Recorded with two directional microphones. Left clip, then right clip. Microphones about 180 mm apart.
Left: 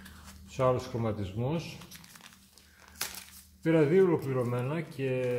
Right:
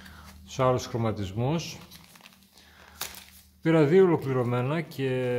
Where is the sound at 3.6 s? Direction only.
30° right (ahead or behind).